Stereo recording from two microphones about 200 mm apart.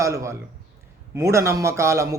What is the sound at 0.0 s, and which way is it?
A man's voice, 15° right (ahead or behind).